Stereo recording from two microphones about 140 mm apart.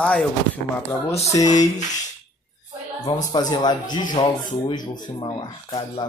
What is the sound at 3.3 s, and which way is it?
Speech, 30° left (ahead or behind).